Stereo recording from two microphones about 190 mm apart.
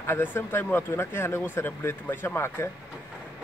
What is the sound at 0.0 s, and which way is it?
A man's voice, 10° left (ahead or behind).